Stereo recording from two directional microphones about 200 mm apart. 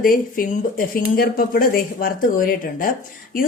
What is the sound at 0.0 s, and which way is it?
A woman's voice, 45° left (ahead or behind).